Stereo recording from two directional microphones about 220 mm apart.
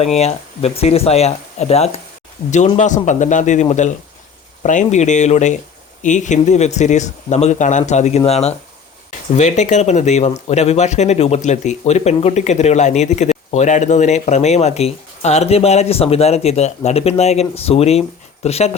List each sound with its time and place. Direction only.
0.0 s speech: 30° left (ahead or behind)